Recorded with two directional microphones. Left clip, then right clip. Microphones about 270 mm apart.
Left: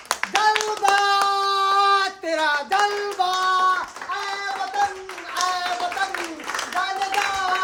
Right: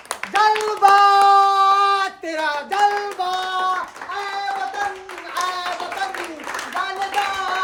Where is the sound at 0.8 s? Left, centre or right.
Centre.